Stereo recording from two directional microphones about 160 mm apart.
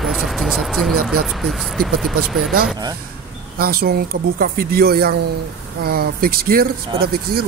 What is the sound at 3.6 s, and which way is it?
Speech, 70° right (ahead or behind).